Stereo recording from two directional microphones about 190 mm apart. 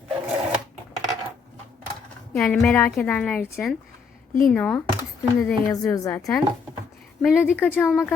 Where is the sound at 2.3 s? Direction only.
5° left (ahead or behind).